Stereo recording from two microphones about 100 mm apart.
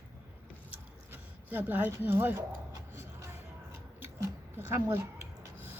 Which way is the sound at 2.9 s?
25° right (ahead or behind).